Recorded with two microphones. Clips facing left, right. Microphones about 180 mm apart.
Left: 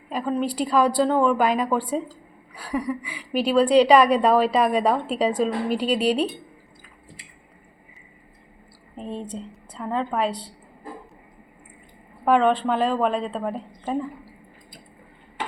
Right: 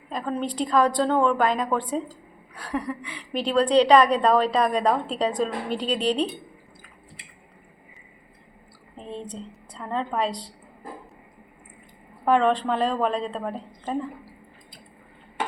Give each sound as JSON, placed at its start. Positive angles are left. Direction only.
{"t": 0.1, "sound": "a woman's voice", "side_deg": 5}
{"t": 9.0, "sound": "a woman's voice", "side_deg": 5}
{"t": 12.2, "sound": "a woman's voice", "side_deg": 5}